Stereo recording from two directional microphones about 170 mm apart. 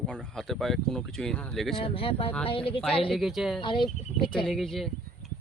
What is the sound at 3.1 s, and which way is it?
Speech, centre (ahead or behind).